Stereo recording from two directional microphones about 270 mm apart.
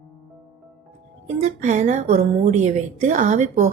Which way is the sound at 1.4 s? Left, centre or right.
Right.